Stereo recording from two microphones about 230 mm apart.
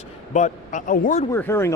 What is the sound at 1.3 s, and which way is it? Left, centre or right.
Speech, centre.